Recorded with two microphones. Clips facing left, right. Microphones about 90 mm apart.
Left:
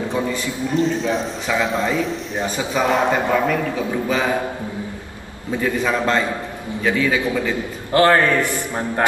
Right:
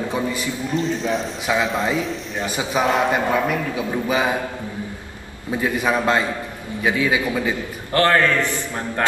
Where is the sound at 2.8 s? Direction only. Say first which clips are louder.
Even; 15° right (ahead or behind).